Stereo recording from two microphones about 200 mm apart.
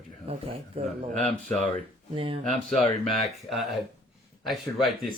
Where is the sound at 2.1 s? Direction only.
25° right (ahead or behind).